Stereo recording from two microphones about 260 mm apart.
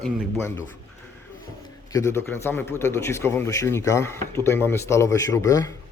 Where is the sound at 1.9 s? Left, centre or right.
Centre.